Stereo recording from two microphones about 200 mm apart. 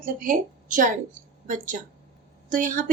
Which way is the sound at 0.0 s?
45° right (ahead or behind).